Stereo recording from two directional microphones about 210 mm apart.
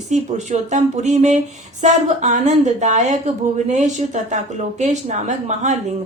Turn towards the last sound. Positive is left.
turn(degrees=-35)  # may be behind; listen again after turning